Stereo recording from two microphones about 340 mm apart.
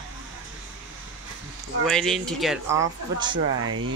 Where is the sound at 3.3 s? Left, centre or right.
Right.